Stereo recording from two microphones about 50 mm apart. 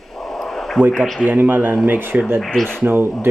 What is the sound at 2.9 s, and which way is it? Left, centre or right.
Speech, right.